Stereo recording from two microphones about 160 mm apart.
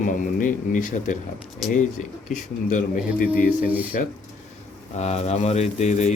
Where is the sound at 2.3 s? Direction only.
55° left (ahead or behind).